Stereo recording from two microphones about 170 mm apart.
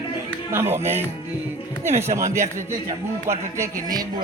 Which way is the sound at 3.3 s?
20° right (ahead or behind).